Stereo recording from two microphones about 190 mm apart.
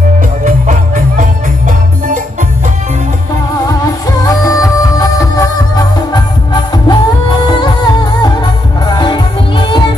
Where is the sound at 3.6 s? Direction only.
20° left (ahead or behind).